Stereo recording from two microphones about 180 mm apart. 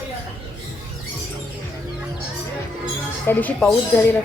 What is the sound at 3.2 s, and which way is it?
Speech, 10° left (ahead or behind).